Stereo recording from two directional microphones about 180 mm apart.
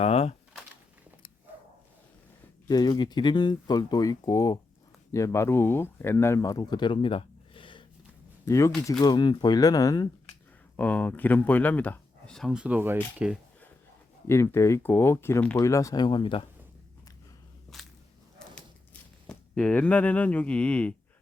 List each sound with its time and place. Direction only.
0.0 s a sound: 35° left (ahead or behind)
2.6 s speech: 20° left (ahead or behind)
8.4 s speech: 15° left (ahead or behind)
10.8 s speech: 10° left (ahead or behind); by 13.4 s 5° right (ahead or behind)
14.3 s speech: 15° left (ahead or behind)
17.7 s walk: centre (ahead or behind)
19.3 s speech: 5° left (ahead or behind)